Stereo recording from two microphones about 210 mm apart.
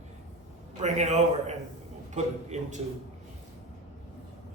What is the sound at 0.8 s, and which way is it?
Speech, 30° right (ahead or behind).